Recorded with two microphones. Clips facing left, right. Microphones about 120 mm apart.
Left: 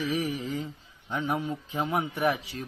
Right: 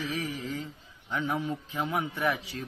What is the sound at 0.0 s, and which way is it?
A man's voice, 15° left (ahead or behind).